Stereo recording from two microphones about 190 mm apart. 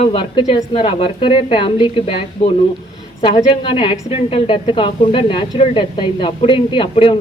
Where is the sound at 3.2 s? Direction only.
30° left (ahead or behind).